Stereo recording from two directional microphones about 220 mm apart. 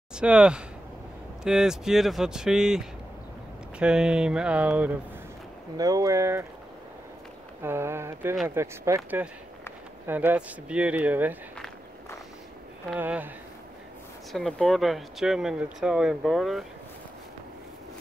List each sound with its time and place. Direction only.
0.1 s speech: 5° right (ahead or behind)
7.6 s speech: 10° right (ahead or behind)
12.9 s speech: 5° right (ahead or behind)
14.3 s speech: centre (ahead or behind)